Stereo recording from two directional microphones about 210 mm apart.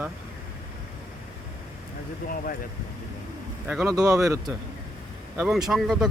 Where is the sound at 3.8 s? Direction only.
15° right (ahead or behind).